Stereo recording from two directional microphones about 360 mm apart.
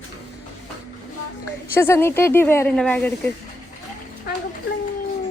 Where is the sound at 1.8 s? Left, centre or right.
Centre.